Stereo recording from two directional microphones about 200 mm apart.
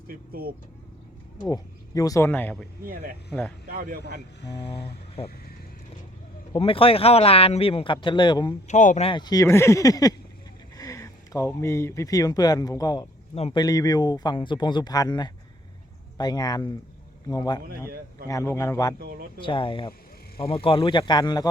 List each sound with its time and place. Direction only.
0.1 s speech: 50° right (ahead or behind)
1.4 s speech: 20° left (ahead or behind)
2.8 s speech: 45° right (ahead or behind)
4.6 s speech: 30° left (ahead or behind)
6.5 s speech: 25° left (ahead or behind)
8.6 s speech: 35° left (ahead or behind); by 18.9 s 15° left (ahead or behind)
18.9 s speech: 50° right (ahead or behind)
19.4 s speech: 25° left (ahead or behind)